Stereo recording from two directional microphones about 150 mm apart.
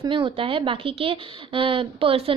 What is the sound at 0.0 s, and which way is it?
Speech, 35° right (ahead or behind).